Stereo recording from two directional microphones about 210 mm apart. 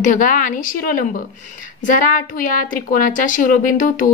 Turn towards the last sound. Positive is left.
turn(degrees=40)  # may be behind; listen again after turning